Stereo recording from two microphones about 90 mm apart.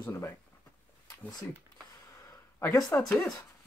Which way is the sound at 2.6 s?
40° left (ahead or behind).